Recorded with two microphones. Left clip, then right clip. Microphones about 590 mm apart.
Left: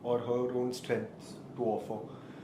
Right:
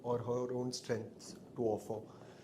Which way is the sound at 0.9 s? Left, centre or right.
Right.